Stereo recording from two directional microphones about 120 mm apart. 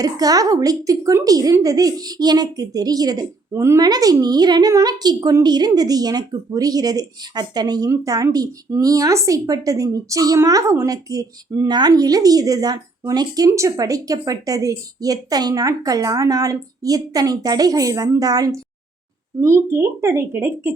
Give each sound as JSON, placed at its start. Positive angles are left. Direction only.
{"t": 0.0, "sound": "a woman's voice", "side_deg": -30}
{"t": 3.8, "sound": "a woman's voice", "side_deg": -35}